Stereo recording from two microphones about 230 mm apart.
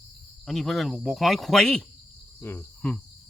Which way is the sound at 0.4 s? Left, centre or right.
Centre.